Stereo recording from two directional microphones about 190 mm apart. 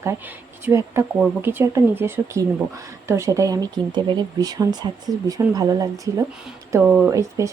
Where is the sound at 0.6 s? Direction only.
15° right (ahead or behind).